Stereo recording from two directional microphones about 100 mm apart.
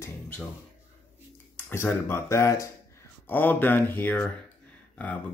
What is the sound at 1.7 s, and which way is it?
Speech, 20° left (ahead or behind).